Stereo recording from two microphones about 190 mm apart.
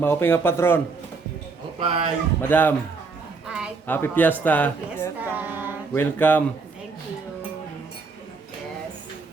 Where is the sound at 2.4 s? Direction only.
10° left (ahead or behind).